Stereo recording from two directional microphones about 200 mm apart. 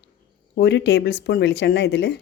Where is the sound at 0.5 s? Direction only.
60° left (ahead or behind).